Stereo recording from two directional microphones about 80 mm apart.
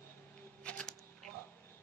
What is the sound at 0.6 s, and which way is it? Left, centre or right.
Camera, centre.